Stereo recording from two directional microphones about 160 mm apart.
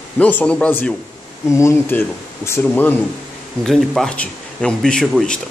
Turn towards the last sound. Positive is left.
turn(degrees=0)  # may be behind; listen again after turning